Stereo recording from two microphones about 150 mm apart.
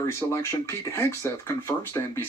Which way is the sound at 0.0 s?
20° left (ahead or behind).